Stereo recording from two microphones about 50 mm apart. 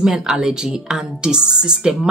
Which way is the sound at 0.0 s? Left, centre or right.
Centre.